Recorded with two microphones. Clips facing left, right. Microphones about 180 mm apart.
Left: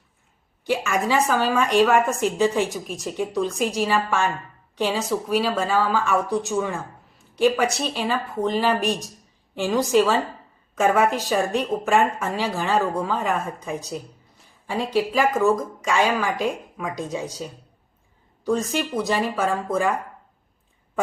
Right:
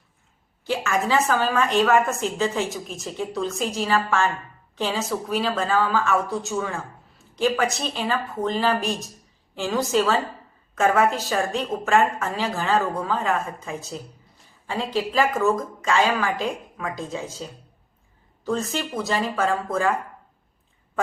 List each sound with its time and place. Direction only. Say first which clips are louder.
0.6 s a woman's voice: left 1 dB; 15° left (ahead or behind)
14.7 s a woman's voice: left 3 dB; 10° left (ahead or behind)